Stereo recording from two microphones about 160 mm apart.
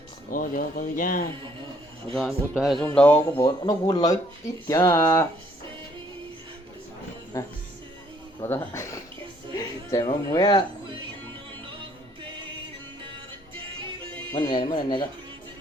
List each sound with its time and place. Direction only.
0.3 s speech: 60° left (ahead or behind)
2.1 s speech: centre (ahead or behind)
2.8 s speech: 10° left (ahead or behind)
7.3 s speech: 20° left (ahead or behind)
14.3 s speech: 30° left (ahead or behind)